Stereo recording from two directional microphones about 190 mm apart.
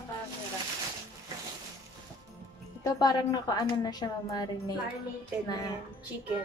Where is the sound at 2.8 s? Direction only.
20° left (ahead or behind).